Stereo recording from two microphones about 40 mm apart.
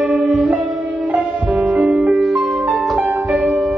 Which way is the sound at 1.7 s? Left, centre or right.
Centre.